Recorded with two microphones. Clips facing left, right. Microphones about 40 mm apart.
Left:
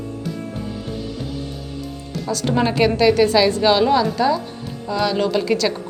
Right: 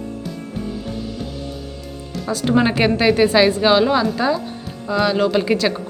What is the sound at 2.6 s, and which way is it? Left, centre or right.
Speech, right.